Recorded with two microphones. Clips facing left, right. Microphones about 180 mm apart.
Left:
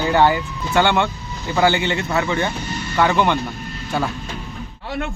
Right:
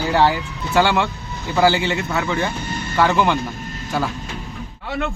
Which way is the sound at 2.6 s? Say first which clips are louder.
Even; 50° right (ahead or behind).